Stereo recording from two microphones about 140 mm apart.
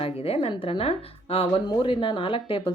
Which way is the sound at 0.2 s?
45° left (ahead or behind).